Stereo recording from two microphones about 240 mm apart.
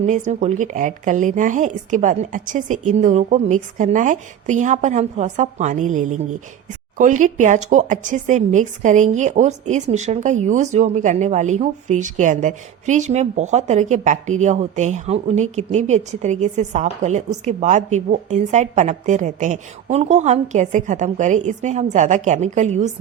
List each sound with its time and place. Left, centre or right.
0.0 s a woman's voice: right